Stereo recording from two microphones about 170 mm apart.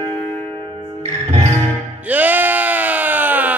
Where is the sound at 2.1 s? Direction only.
10° right (ahead or behind).